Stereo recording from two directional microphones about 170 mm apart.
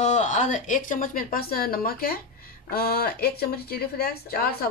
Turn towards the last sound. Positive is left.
turn(degrees=60)  # may be behind; listen again after turning